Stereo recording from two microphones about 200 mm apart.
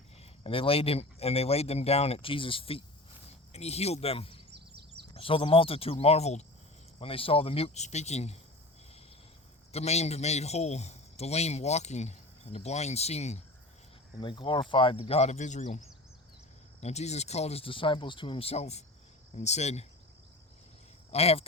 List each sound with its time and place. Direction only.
0.2 s speech: 25° left (ahead or behind)
4.5 s a sound: 55° right (ahead or behind)
5.1 s speech: 25° left (ahead or behind)
9.7 s speech: 35° left (ahead or behind)
16.8 s speech: 35° left (ahead or behind)
21.1 s speech: 30° left (ahead or behind)